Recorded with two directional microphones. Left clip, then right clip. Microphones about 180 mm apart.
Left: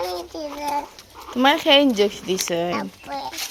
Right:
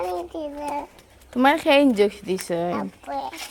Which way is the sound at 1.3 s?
15° right (ahead or behind).